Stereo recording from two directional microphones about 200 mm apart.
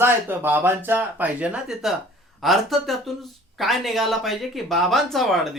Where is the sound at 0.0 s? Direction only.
10° right (ahead or behind).